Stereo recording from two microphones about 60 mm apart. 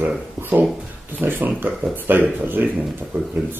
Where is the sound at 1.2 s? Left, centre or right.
Right.